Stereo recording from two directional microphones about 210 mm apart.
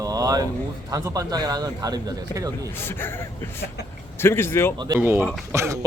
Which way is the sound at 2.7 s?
10° left (ahead or behind).